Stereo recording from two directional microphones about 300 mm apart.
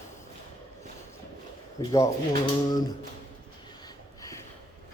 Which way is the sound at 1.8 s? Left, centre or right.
Centre.